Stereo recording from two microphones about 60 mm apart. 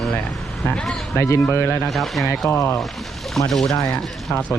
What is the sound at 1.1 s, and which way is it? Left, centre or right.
Speech, left.